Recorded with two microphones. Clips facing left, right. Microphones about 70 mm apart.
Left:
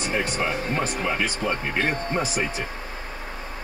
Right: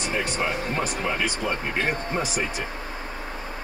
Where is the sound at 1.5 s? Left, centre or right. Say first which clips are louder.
Left 1 dB; centre.